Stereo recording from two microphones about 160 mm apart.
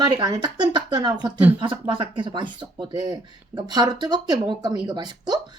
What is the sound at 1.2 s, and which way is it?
Speech, 10° right (ahead or behind).